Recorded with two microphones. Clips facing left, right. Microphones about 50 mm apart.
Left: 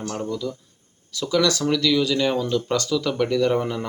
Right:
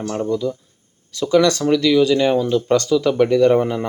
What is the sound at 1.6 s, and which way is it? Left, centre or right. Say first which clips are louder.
Speech: right 6 dB; centre.